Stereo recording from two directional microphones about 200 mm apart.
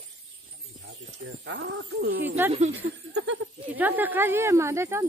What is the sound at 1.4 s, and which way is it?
Speech, 65° right (ahead or behind).